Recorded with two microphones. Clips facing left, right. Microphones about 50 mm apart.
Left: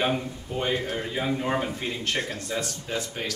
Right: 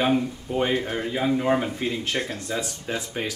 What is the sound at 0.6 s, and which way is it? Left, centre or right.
Speech, centre.